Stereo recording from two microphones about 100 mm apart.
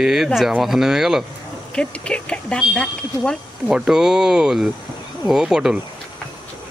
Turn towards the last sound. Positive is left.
turn(degrees=-5)  # may be behind; listen again after turning